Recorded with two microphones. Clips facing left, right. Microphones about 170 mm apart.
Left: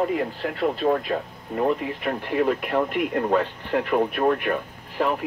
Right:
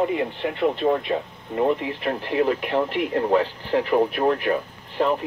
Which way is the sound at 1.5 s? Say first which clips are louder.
Right 1 dB; centre (ahead or behind).